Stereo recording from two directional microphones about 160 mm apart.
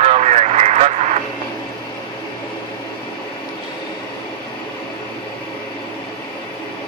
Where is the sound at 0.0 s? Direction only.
45° right (ahead or behind).